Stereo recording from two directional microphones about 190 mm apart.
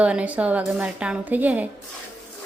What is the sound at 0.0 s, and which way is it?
A woman's voice, 5° right (ahead or behind).